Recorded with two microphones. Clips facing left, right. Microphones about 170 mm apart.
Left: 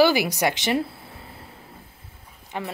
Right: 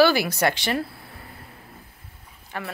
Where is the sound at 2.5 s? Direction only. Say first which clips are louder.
Left 2 dB; 20° left (ahead or behind).